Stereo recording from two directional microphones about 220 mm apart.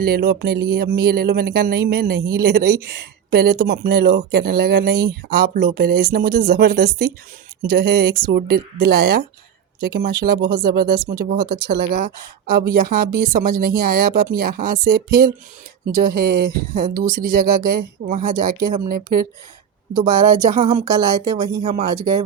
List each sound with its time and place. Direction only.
0.0 s speech: 45° right (ahead or behind)
20.7 s speech: 20° right (ahead or behind)
21.6 s speech: 30° right (ahead or behind)